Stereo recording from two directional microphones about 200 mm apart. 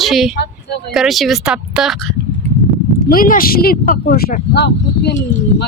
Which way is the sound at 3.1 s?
45° left (ahead or behind).